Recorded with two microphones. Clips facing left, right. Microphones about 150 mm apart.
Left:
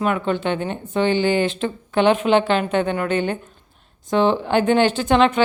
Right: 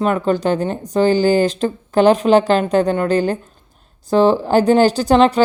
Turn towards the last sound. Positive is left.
turn(degrees=-35)  # may be behind; listen again after turning